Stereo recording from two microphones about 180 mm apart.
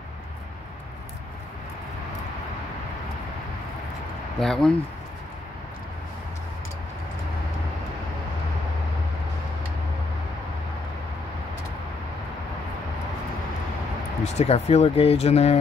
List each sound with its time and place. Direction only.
4.4 s speech: 5° left (ahead or behind)
14.2 s speech: 40° left (ahead or behind)